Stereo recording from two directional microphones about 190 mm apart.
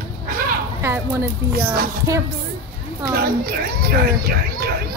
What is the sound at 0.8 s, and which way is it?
Speech, 10° right (ahead or behind).